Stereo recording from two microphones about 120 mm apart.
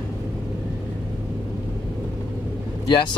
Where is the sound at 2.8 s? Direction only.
40° left (ahead or behind).